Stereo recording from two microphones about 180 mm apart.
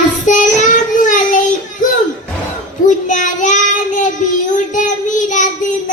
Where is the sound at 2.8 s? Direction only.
45° left (ahead or behind).